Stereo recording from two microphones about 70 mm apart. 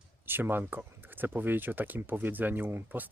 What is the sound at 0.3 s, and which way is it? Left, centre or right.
Speech, right.